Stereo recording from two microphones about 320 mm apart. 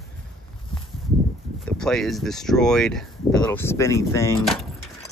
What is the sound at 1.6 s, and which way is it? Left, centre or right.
Speech, centre.